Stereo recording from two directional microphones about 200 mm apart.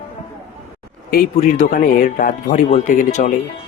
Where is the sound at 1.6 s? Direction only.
40° left (ahead or behind).